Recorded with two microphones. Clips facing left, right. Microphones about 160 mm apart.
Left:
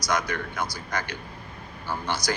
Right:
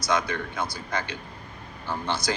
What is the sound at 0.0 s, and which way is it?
A man's voice, 25° right (ahead or behind).